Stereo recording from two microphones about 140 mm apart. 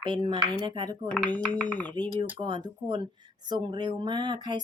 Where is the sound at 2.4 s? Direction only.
35° right (ahead or behind).